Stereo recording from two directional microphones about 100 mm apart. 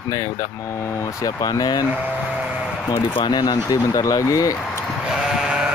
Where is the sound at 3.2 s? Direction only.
40° left (ahead or behind).